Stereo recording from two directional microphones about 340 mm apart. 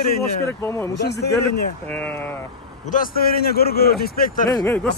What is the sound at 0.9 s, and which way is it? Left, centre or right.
Speech, left.